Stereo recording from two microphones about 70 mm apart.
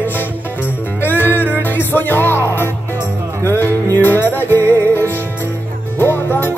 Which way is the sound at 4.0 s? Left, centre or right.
Left.